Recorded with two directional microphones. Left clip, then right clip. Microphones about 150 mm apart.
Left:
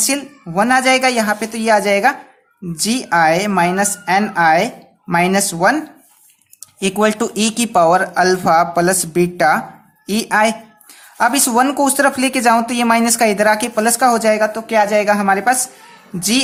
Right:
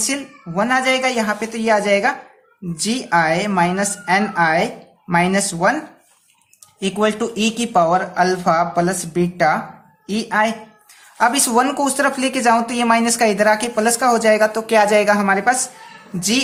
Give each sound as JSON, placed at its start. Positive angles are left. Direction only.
{"t": 0.0, "sound": "a man's voice", "side_deg": 30}
{"t": 11.2, "sound": "speech", "side_deg": 30}
{"t": 14.5, "sound": "a woman's voice", "side_deg": 10}